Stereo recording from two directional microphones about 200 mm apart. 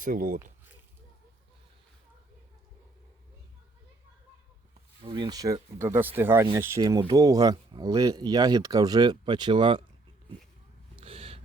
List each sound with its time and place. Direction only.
0.0 s speech: 45° right (ahead or behind)
5.0 s speech: 25° right (ahead or behind)
10.9 s gasp: 30° right (ahead or behind)